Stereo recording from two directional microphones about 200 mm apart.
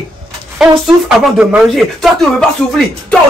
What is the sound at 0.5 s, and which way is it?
Speech, 5° right (ahead or behind).